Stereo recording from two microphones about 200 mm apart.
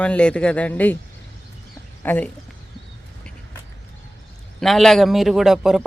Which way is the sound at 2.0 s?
10° left (ahead or behind).